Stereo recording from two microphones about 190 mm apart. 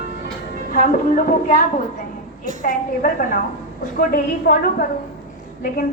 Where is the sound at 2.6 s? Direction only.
45° left (ahead or behind).